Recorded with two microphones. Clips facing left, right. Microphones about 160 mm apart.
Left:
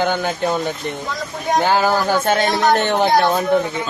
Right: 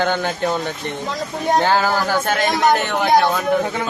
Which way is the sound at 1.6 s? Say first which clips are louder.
Left 1 dB; 15° left (ahead or behind).